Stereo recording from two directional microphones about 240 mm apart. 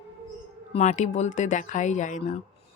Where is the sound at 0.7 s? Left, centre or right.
Left.